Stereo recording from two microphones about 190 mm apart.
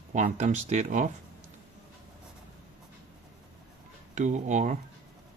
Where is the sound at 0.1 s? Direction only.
40° right (ahead or behind).